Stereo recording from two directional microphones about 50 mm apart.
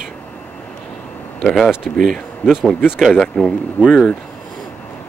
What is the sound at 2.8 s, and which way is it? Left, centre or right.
Speech, centre.